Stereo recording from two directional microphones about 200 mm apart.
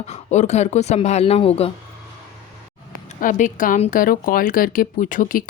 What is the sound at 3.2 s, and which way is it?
A woman's voice, 40° left (ahead or behind).